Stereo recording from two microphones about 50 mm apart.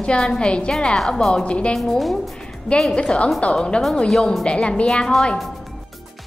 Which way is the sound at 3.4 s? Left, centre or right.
Left.